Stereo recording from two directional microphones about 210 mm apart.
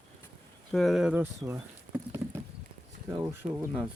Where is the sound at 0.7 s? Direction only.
Centre (ahead or behind).